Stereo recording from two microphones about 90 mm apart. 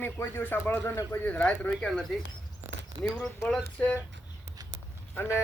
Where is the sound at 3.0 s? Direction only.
10° left (ahead or behind).